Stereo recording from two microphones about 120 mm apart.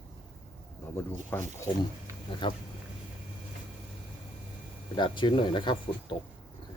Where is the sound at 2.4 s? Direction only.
40° left (ahead or behind).